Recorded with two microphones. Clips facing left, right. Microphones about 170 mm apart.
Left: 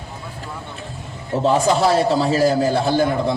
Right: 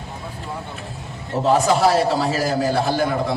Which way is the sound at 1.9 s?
30° left (ahead or behind).